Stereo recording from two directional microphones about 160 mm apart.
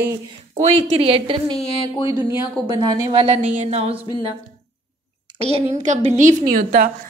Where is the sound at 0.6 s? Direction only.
40° right (ahead or behind).